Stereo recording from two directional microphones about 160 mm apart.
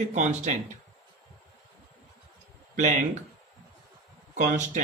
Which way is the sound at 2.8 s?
50° right (ahead or behind).